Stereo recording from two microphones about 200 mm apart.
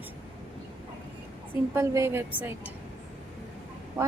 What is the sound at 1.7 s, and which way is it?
Speech, 15° right (ahead or behind).